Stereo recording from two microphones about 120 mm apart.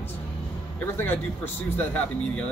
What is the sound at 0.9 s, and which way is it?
Speech, 15° left (ahead or behind).